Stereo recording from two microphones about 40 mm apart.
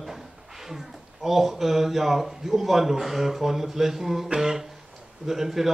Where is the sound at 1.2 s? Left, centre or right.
Centre.